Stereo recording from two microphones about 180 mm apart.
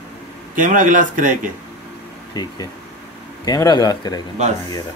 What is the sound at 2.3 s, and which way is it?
Speech, 20° left (ahead or behind).